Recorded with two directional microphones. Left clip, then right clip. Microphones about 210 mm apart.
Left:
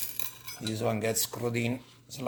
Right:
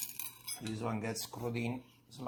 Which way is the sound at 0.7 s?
30° left (ahead or behind).